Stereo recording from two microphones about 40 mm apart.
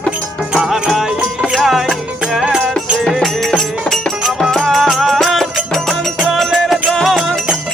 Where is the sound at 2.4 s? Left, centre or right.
Right.